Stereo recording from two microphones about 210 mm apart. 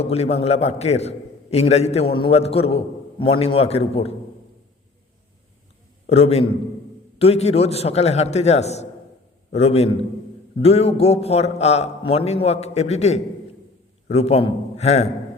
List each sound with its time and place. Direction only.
0.0 s a man's voice: 30° left (ahead or behind)
6.1 s a man's voice: 30° left (ahead or behind)